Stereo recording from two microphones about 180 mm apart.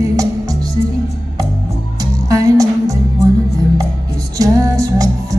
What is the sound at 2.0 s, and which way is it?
Music, 20° right (ahead or behind).